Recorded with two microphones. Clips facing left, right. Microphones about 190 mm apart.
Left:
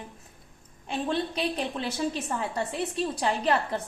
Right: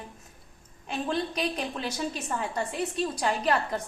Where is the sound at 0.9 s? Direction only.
30° left (ahead or behind).